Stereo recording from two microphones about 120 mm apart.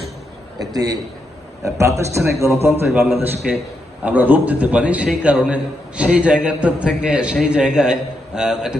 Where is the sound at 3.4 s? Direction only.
5° right (ahead or behind).